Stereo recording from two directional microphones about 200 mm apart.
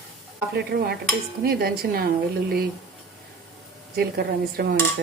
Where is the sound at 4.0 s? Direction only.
50° right (ahead or behind).